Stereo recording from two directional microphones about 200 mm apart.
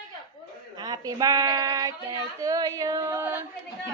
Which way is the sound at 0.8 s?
20° right (ahead or behind).